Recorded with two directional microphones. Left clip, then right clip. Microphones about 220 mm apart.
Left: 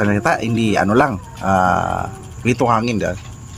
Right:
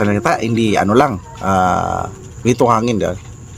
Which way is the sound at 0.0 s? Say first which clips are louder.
Right 1 dB; 20° right (ahead or behind).